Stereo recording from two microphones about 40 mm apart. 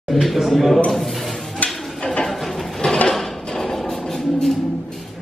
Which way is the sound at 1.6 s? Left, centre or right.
Left.